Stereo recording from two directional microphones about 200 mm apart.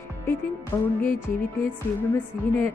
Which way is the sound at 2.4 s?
10° left (ahead or behind).